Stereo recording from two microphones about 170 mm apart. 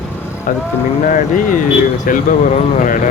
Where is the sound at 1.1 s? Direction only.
50° left (ahead or behind).